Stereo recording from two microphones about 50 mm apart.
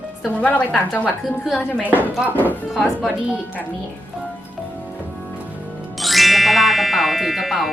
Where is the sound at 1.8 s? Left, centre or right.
Right.